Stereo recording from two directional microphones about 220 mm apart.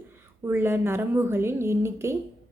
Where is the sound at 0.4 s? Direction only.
10° right (ahead or behind).